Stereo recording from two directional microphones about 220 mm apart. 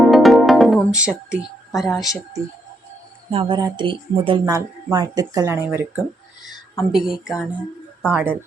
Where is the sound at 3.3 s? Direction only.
25° right (ahead or behind).